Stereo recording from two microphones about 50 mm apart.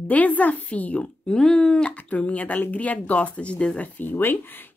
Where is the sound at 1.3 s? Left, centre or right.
Centre.